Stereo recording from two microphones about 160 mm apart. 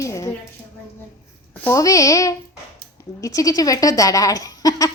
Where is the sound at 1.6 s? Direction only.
20° left (ahead or behind).